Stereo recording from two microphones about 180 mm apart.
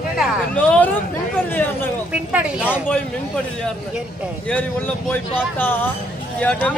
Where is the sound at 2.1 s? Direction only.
5° right (ahead or behind).